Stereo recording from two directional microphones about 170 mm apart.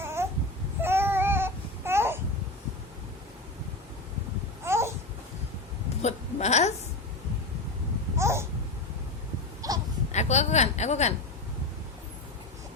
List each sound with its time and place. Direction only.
0.0 s babbling: 15° right (ahead or behind)
0.8 s baby cry: 15° right (ahead or behind)
4.6 s babbling: 15° right (ahead or behind)
6.0 s hiccup: 40° left (ahead or behind)
8.2 s babbling: 15° right (ahead or behind)
9.6 s a sound: 20° right (ahead or behind)
10.1 s a sound: 40° left (ahead or behind)